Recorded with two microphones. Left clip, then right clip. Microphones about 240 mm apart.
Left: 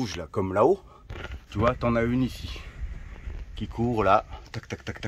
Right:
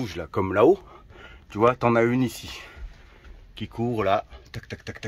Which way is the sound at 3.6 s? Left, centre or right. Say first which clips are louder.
Even; centre.